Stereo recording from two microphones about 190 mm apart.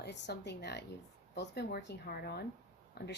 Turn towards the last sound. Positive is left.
turn(degrees=60)  # may be behind; listen again after turning